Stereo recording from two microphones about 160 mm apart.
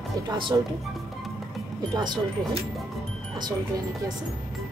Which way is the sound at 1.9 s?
25° right (ahead or behind).